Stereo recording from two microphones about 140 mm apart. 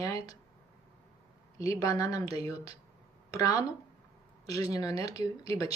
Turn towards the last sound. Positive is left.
turn(degrees=25)  # may be behind; listen again after turning